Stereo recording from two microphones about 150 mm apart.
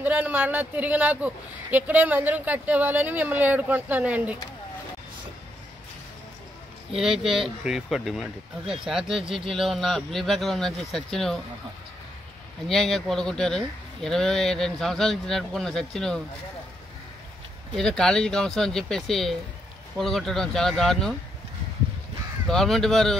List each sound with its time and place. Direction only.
0.0 s speech: 10° right (ahead or behind)
7.0 s a man's voice: 5° right (ahead or behind)
12.6 s a man's voice: centre (ahead or behind)
17.7 s a man's voice: 5° left (ahead or behind)
22.5 s a man's voice: centre (ahead or behind)